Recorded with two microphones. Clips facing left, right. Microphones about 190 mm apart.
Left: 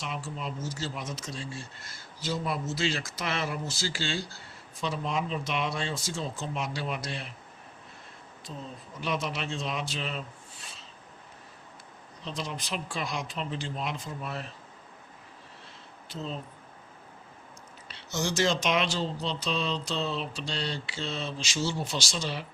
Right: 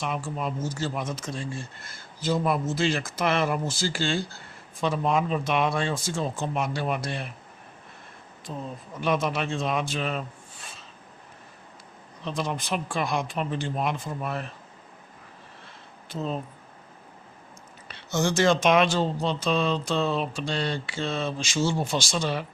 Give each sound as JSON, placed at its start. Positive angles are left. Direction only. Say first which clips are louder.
{"t": 0.0, "sound": "speech", "louder": "right 6 dB", "side_deg": -50}
{"t": 8.5, "sound": "a man's voice", "louder": "right 6 dB", "side_deg": -55}
{"t": 12.2, "sound": "speech", "louder": "right 6 dB", "side_deg": -55}
{"t": 16.0, "sound": "speech", "louder": "right 6 dB", "side_deg": -55}
{"t": 17.8, "sound": "speech", "louder": "right 6 dB", "side_deg": -55}